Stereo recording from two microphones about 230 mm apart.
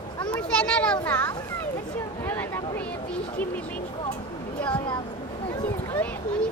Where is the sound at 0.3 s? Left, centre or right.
Centre.